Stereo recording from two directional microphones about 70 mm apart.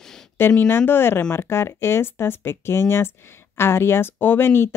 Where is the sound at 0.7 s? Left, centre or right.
Left.